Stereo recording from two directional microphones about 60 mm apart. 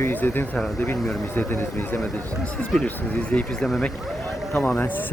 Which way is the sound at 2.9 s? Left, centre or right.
Centre.